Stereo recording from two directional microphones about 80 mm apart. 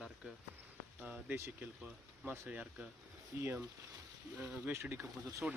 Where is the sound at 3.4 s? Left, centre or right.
Right.